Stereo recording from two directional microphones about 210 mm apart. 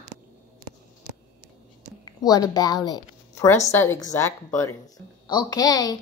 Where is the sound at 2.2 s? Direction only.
15° left (ahead or behind).